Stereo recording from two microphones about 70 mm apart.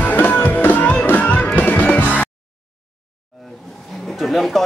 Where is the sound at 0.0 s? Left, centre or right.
Left.